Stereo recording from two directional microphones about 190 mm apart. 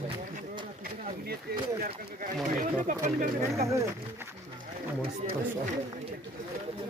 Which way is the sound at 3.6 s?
15° right (ahead or behind).